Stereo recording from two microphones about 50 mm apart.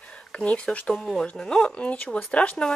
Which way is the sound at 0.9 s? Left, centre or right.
Centre.